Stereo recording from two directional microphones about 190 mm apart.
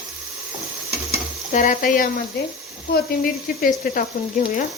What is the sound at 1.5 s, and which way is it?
Speech, 45° left (ahead or behind).